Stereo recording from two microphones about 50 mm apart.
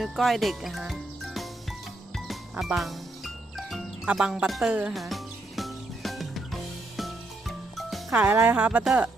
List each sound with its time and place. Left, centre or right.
0.0 s speech: centre
1.2 s music: centre
4.0 s speech: centre
4.9 s music: centre
8.1 s speech: right